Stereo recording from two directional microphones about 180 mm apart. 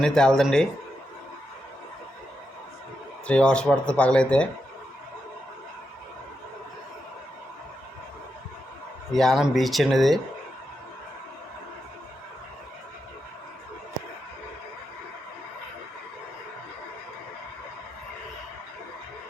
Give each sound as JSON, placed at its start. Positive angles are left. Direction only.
{"t": 0.0, "sound": "speech", "side_deg": 5}
{"t": 3.2, "sound": "speech", "side_deg": 5}
{"t": 9.1, "sound": "speech", "side_deg": 0}